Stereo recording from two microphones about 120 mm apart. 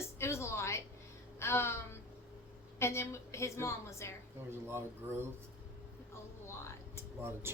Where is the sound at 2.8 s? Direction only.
20° left (ahead or behind).